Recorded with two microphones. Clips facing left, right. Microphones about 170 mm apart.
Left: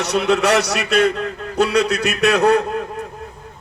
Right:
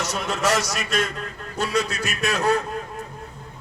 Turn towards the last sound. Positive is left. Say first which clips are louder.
# left 7 dB
turn(degrees=65)  # may be behind; listen again after turning